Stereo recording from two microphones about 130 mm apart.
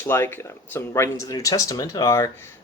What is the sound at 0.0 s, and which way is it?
Speech, 20° left (ahead or behind).